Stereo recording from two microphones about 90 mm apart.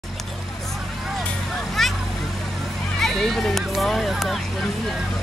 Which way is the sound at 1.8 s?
5° left (ahead or behind).